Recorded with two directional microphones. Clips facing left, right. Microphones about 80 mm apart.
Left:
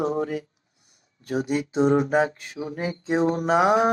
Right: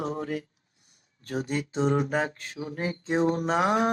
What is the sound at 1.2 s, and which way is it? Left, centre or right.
Speech, centre.